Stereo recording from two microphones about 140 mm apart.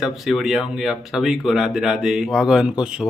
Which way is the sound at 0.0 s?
Centre (ahead or behind).